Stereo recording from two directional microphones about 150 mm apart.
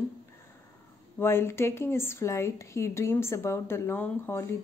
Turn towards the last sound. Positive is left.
turn(degrees=15)  # may be behind; listen again after turning